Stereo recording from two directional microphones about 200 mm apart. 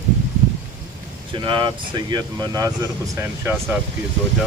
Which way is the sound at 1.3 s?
25° right (ahead or behind).